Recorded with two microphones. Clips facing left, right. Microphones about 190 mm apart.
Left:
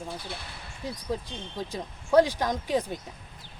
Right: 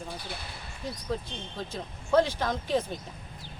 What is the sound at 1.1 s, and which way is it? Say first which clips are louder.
Speech: left 1 dB; 10° left (ahead or behind).